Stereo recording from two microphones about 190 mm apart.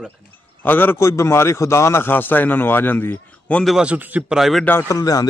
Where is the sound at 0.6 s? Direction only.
10° left (ahead or behind).